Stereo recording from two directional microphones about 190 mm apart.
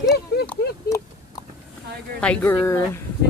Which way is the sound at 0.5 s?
15° left (ahead or behind).